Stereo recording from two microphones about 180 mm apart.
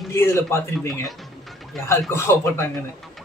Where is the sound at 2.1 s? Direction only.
15° left (ahead or behind).